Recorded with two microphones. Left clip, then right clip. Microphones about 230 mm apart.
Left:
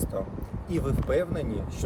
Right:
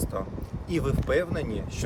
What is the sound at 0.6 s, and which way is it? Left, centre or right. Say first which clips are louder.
Speech: right 1 dB; centre.